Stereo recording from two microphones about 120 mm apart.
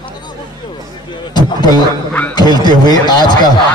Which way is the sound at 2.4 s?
35° left (ahead or behind).